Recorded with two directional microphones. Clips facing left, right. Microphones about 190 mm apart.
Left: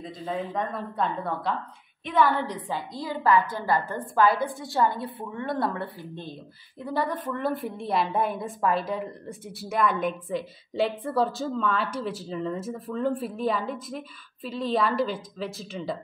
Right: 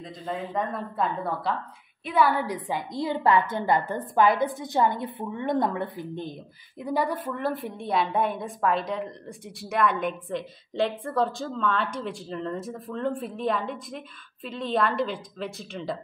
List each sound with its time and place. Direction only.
0.5 s a woman's voice: 5° right (ahead or behind)